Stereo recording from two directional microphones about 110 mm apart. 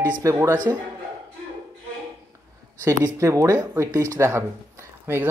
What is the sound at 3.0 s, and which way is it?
Speech, 30° right (ahead or behind).